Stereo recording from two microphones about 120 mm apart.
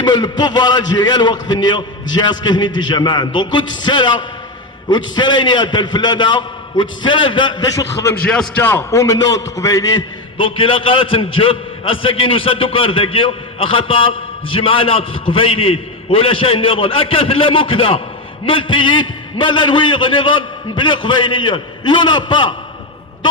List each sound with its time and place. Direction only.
0.0 s a man's voice: 35° left (ahead or behind)
8.1 s a man's voice: 10° left (ahead or behind)
8.6 s a man's voice: 25° left (ahead or behind)
10.3 s a man's voice: 45° left (ahead or behind)